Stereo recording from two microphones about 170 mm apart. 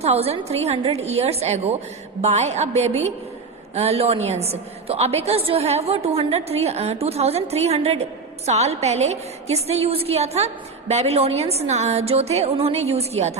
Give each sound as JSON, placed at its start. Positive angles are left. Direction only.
{"t": 0.0, "sound": "a woman's voice", "side_deg": -35}